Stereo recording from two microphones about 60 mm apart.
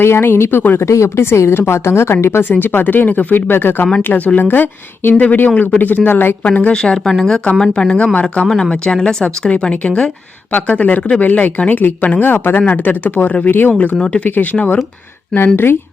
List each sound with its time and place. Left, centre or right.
0.0 s speech: left
0.8 s speech: left
6.9 s speech: centre; by 14.8 s left
15.5 s speech: left